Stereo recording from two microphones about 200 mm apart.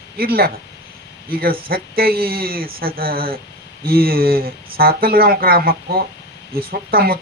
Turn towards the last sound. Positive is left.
turn(degrees=-50)  # may be behind; listen again after turning